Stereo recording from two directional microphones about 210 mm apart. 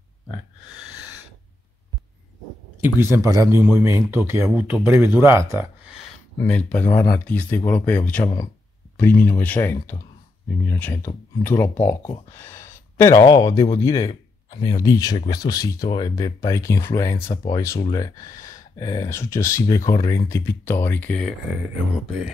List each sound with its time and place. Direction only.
2.8 s a man's voice: 10° right (ahead or behind)
6.4 s speech: 5° left (ahead or behind)